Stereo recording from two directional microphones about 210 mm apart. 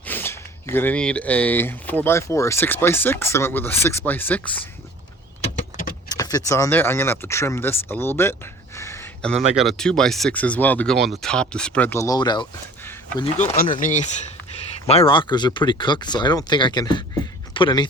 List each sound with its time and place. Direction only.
0.1 s speech: 10° left (ahead or behind)
5.4 s vehicle: 40° left (ahead or behind)
6.1 s speech: 15° left (ahead or behind)
8.8 s a sound: 10° left (ahead or behind)
9.6 s speech: centre (ahead or behind); by 12.5 s 20° left (ahead or behind)
13.3 s speech: 35° left (ahead or behind)